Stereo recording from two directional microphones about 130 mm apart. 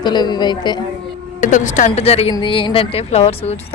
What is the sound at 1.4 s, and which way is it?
Speech, 70° left (ahead or behind).